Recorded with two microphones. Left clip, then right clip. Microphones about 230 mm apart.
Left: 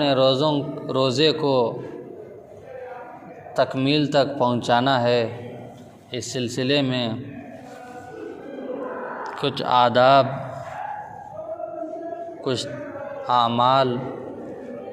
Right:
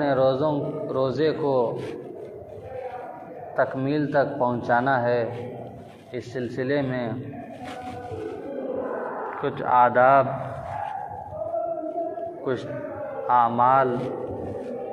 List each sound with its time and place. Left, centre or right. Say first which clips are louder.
0.0 s a man's voice: left 3 dB; left
3.5 s a man's voice: left 3 dB; left
9.4 s speech: left 1 dB; left
13.4 s speech: left 1 dB; left